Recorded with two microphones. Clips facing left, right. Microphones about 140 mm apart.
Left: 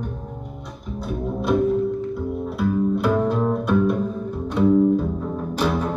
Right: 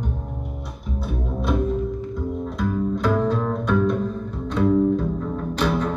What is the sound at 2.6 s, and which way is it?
Music, 10° left (ahead or behind).